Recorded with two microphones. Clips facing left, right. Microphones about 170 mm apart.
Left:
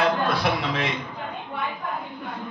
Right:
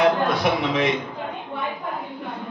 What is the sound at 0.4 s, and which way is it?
Speech, 20° right (ahead or behind).